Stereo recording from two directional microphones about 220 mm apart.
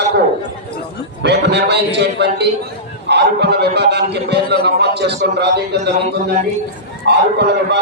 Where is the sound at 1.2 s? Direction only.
50° right (ahead or behind).